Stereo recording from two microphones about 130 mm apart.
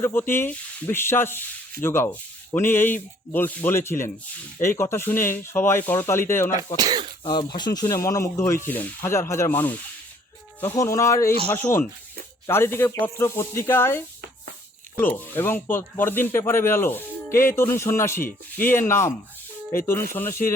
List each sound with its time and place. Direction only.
0.0 s speech: 20° left (ahead or behind)
6.7 s speech: 30° right (ahead or behind)
7.3 s speech: 35° left (ahead or behind); by 20.5 s 15° left (ahead or behind)